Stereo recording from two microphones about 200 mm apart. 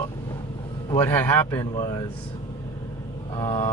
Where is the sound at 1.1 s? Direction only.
10° left (ahead or behind).